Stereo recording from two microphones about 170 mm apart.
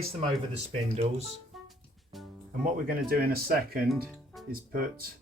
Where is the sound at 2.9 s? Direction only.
60° right (ahead or behind).